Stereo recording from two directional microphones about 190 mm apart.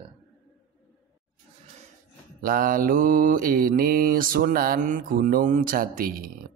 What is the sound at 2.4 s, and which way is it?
Mantra, 45° right (ahead or behind).